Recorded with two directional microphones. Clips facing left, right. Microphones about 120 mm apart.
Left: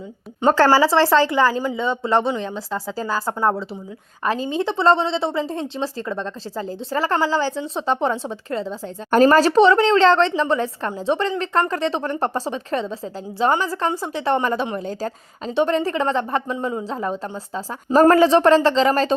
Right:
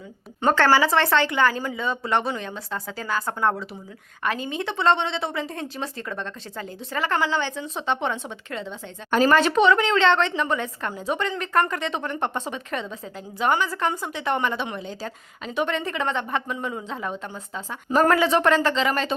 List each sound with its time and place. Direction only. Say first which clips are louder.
0.5 s a woman's voice: left 4 dB; 35° left (ahead or behind)